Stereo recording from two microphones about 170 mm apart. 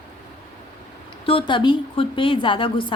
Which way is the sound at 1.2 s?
30° left (ahead or behind).